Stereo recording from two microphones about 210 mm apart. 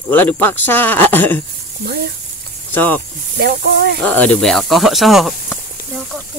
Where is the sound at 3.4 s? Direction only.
50° right (ahead or behind).